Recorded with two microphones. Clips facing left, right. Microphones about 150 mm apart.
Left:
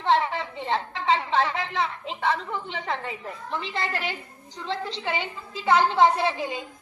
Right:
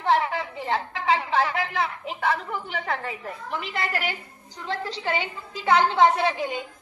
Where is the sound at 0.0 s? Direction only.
25° left (ahead or behind).